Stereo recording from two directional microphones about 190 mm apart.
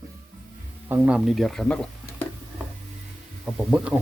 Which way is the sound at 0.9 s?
10° right (ahead or behind).